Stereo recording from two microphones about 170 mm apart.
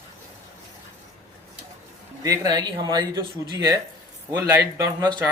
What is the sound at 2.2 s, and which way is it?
Speech, 20° right (ahead or behind).